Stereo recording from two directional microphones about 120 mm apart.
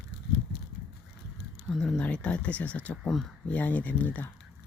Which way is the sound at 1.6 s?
Centre (ahead or behind).